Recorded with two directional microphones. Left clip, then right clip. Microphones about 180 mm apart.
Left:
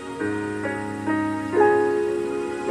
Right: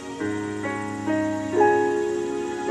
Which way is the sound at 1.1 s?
35° right (ahead or behind).